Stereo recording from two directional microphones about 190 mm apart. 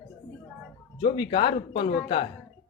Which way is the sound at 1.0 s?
25° left (ahead or behind).